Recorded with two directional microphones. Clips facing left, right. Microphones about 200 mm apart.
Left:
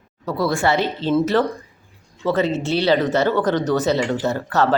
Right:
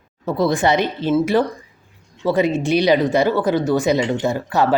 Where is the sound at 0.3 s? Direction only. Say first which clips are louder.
Right 2 dB; 20° right (ahead or behind).